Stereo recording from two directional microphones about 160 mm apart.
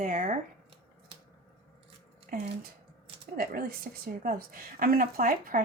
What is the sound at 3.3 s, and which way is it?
A woman's voice, 65° right (ahead or behind).